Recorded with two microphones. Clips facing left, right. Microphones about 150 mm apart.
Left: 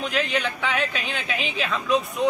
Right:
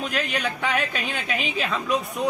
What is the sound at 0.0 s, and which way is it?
A man's voice, 45° right (ahead or behind).